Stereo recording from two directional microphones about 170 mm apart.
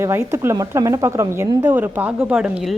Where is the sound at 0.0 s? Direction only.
15° right (ahead or behind).